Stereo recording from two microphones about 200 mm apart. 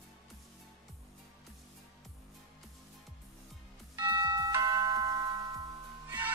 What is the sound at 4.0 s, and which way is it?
Music, 20° right (ahead or behind).